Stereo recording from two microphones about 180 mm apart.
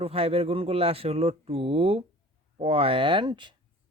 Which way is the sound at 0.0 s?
35° right (ahead or behind).